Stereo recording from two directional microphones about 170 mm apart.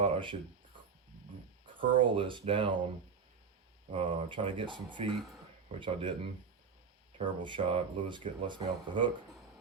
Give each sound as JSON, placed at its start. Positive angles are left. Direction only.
{"t": 0.0, "sound": "a sound", "side_deg": -30}
{"t": 1.6, "sound": "speech", "side_deg": -30}
{"t": 3.9, "sound": "speech", "side_deg": -30}
{"t": 7.2, "sound": "speech", "side_deg": -30}